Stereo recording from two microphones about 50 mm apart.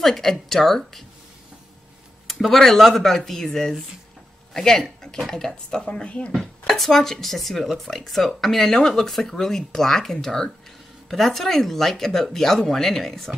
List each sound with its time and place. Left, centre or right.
0.0 s speech: centre
2.2 s speech: centre; by 6.3 s left
6.7 s speech: centre